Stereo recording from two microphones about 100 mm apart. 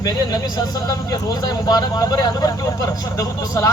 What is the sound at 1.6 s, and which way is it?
Speech, 40° left (ahead or behind).